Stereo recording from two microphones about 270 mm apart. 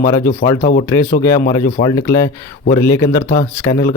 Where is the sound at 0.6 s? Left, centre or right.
Left.